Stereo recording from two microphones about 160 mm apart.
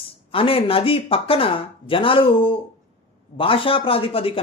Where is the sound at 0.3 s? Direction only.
35° left (ahead or behind).